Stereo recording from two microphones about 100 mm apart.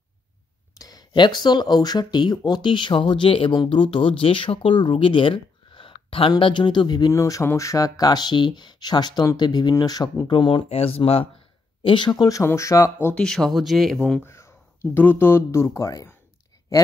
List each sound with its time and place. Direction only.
0.7 s speech: 40° left (ahead or behind); by 6.3 s 65° left (ahead or behind)
6.3 s speech: 50° left (ahead or behind)
7.1 s speech: 35° left (ahead or behind); by 11.2 s 75° left (ahead or behind)
11.8 s speech: 55° left (ahead or behind); by 13.1 s 30° left (ahead or behind)
13.1 s speech: 5° left (ahead or behind)
14.2 s speech: 25° left (ahead or behind)